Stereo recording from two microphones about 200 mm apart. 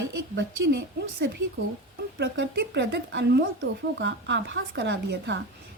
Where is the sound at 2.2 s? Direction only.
60° right (ahead or behind).